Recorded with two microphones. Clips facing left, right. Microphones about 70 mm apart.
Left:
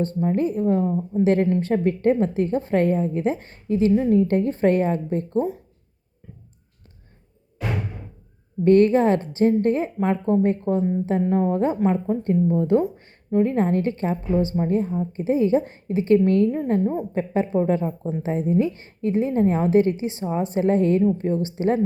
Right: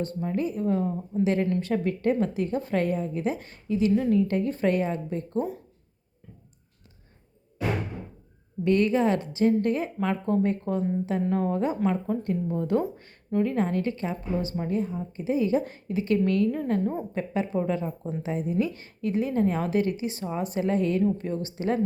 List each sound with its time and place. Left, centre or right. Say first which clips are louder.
0.0 s a woman's voice: left 6 dB; left
1.5 s a woman's voice: left 5 dB; left
8.6 s a woman's voice: left 7 dB; left